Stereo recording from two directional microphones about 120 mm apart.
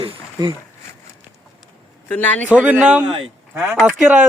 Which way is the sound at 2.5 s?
15° right (ahead or behind).